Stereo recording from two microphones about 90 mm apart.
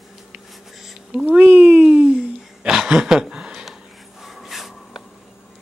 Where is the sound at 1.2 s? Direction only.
20° right (ahead or behind); by 5.0 s 5° right (ahead or behind).